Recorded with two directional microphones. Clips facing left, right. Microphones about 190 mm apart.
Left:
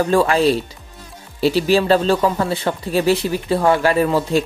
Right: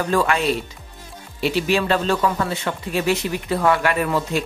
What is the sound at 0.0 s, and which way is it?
Speech, 30° left (ahead or behind).